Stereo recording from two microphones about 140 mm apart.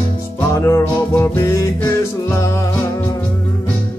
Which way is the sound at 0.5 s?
20° left (ahead or behind).